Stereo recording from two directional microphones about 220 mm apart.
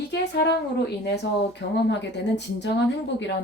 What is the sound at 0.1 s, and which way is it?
Speech, 50° left (ahead or behind).